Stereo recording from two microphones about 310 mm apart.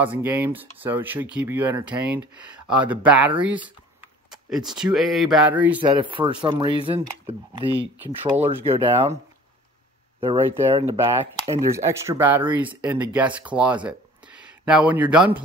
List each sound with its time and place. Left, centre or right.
0.0 s speech: centre
5.8 s speech: centre
8.9 s speech: centre
10.2 s speech: centre
13.8 s a sound: centre